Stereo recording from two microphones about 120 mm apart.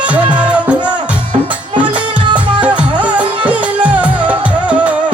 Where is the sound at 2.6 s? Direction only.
10° right (ahead or behind).